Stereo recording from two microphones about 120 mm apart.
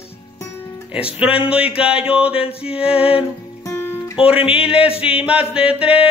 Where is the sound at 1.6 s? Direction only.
55° left (ahead or behind).